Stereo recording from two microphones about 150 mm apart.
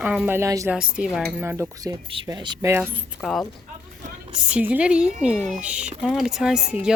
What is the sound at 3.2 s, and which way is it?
Speech, centre (ahead or behind).